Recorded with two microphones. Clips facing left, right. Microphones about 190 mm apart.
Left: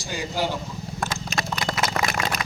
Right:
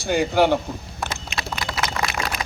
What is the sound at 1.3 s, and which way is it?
Clip-clop, 45° left (ahead or behind).